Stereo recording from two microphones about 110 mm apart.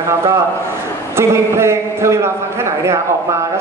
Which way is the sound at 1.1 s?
25° right (ahead or behind).